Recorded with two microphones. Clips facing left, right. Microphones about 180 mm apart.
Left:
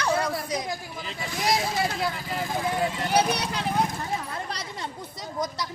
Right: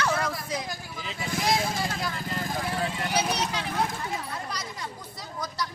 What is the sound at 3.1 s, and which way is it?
Speech, 60° left (ahead or behind).